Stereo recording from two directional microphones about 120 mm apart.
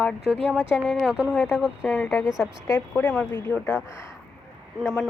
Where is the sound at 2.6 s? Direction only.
25° left (ahead or behind).